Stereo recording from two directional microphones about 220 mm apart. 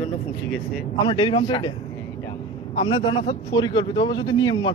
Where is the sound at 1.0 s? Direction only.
20° left (ahead or behind).